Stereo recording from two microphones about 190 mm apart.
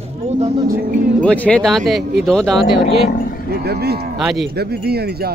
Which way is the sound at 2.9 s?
60° right (ahead or behind).